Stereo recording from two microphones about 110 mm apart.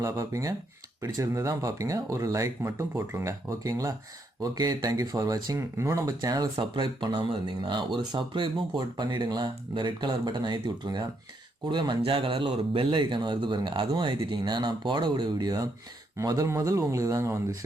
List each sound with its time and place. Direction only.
0.0 s speech: 30° right (ahead or behind)